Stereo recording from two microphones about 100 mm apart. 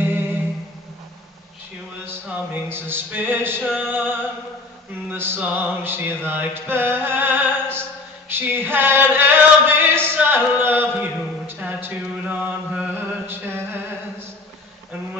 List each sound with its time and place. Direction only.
0.0 s music: 20° right (ahead or behind)
2.2 s music: 15° right (ahead or behind)
5.1 s music: 20° right (ahead or behind)
8.3 s a sound: 20° right (ahead or behind)